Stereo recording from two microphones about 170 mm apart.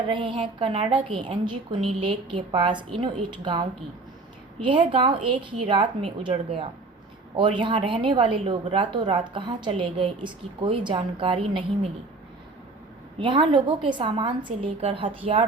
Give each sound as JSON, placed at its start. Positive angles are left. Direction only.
{"t": 0.1, "sound": "speech", "side_deg": -30}
{"t": 13.1, "sound": "speech", "side_deg": -30}